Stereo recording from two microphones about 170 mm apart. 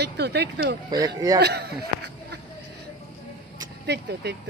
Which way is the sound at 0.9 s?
20° right (ahead or behind).